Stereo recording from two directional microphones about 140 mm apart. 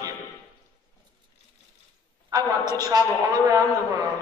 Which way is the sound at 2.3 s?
25° right (ahead or behind).